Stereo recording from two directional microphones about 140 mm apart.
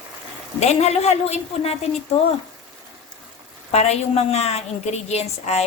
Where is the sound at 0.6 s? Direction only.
50° left (ahead or behind).